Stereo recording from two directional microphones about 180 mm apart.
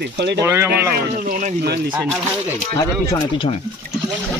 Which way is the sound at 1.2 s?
50° right (ahead or behind).